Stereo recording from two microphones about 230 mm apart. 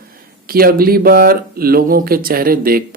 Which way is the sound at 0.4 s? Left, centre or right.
Right.